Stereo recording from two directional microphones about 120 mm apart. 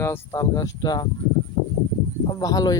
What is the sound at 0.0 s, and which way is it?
Speech, 20° left (ahead or behind).